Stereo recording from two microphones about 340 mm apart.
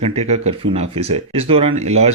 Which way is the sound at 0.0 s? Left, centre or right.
Centre.